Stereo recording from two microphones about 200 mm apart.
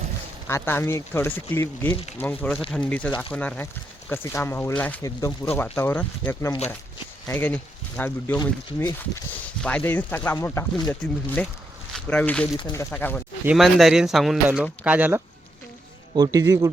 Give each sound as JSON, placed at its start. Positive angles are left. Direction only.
{"t": 0.4, "sound": "speech", "side_deg": 10}
{"t": 12.5, "sound": "speech", "side_deg": 20}
{"t": 13.4, "sound": "speech", "side_deg": -5}
{"t": 16.1, "sound": "a man's voice", "side_deg": -20}